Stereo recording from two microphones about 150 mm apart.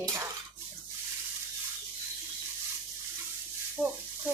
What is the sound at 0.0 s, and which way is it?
Dishes, 20° right (ahead or behind).